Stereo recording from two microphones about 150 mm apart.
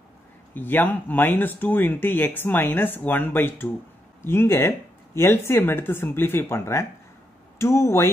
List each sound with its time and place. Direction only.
0.6 s speech: 15° left (ahead or behind)